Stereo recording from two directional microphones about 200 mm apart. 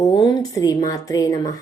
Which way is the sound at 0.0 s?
20° left (ahead or behind).